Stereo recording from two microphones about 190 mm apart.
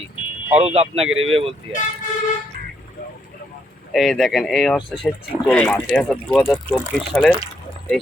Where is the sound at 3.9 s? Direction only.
Centre (ahead or behind).